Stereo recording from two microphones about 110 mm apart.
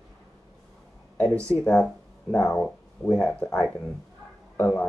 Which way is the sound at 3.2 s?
10° left (ahead or behind).